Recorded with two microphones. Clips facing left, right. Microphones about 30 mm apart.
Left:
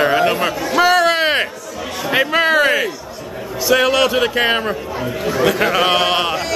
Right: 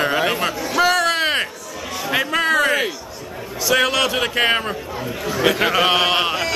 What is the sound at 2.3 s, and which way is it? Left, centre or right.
Speech, left.